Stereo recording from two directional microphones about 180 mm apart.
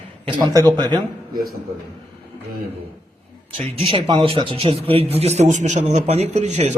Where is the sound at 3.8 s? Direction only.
30° right (ahead or behind).